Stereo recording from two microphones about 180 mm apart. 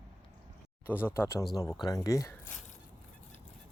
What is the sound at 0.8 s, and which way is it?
Speech, 10° left (ahead or behind).